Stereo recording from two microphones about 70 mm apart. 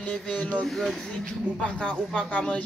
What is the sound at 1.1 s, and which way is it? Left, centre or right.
Speech, centre.